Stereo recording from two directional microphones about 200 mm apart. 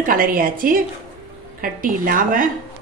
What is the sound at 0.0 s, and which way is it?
A woman's voice, 45° right (ahead or behind).